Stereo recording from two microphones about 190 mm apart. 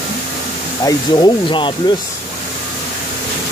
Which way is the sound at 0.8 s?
25° left (ahead or behind).